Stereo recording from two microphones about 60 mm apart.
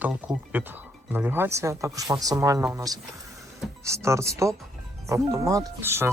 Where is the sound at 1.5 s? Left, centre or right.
Right.